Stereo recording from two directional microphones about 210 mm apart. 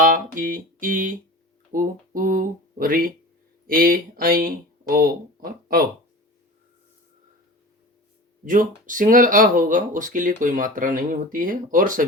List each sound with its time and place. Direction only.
0.0 s speech: 40° right (ahead or behind)
8.4 s speech: 40° right (ahead or behind)